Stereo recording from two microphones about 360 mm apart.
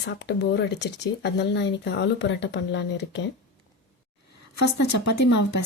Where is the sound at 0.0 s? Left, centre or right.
Left.